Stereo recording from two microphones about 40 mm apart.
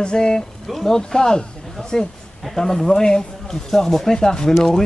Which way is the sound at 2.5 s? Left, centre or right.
Centre.